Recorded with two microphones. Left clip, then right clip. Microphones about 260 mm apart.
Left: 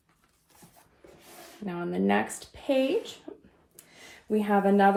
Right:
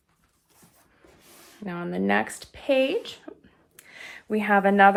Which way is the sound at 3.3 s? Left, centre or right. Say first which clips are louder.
Right 1 dB; right.